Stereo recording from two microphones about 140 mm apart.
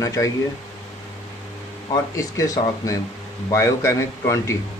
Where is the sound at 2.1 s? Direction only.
25° left (ahead or behind).